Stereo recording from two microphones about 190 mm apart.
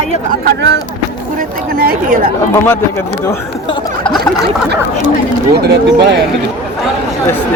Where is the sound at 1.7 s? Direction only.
50° right (ahead or behind).